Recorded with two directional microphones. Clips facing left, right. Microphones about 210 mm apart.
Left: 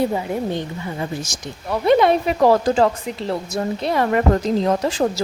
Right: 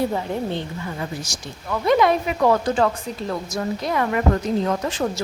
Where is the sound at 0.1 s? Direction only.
10° left (ahead or behind).